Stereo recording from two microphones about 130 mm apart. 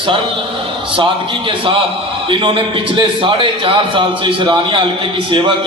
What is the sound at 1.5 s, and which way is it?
A man's voice, 40° right (ahead or behind).